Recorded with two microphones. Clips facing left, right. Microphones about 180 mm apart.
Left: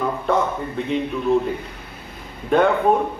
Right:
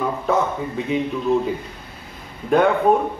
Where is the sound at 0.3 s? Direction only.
Centre (ahead or behind).